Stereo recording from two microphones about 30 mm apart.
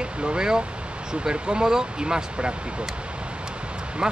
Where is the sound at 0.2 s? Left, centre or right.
Right.